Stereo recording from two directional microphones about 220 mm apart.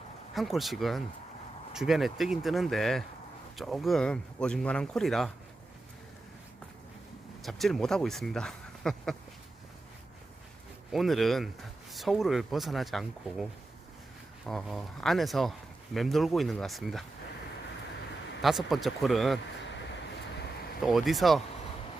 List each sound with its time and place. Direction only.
0.3 s speech: centre (ahead or behind)
7.4 s speech: centre (ahead or behind)
10.9 s speech: centre (ahead or behind)
18.4 s speech: centre (ahead or behind)
20.8 s speech: centre (ahead or behind)